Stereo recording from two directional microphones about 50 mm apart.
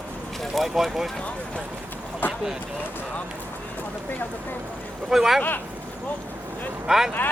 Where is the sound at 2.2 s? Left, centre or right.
Left.